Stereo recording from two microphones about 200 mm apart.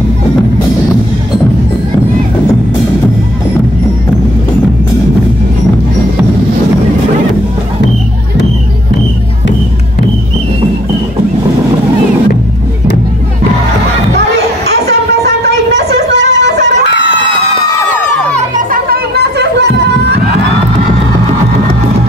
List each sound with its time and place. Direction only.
15.7 s music: 60° right (ahead or behind)
18.7 s chatter: 50° right (ahead or behind)